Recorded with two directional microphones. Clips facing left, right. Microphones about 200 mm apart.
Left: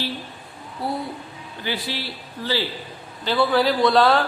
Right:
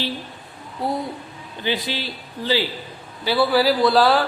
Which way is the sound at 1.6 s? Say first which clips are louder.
Right 3 dB; 20° right (ahead or behind).